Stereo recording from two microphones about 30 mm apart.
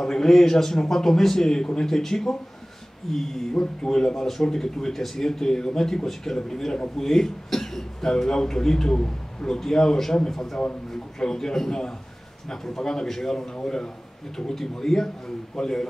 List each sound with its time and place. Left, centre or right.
0.0 s a man's voice: centre
1.9 s a man's voice: centre
3.5 s a man's voice: left
9.6 s a man's voice: centre